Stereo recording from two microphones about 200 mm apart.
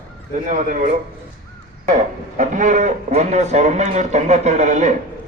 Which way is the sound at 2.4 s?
40° right (ahead or behind).